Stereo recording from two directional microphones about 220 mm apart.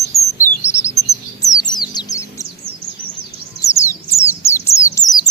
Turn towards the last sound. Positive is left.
turn(degrees=15)  # may be behind; listen again after turning